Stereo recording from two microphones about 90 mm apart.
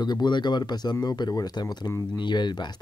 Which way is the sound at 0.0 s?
55° left (ahead or behind).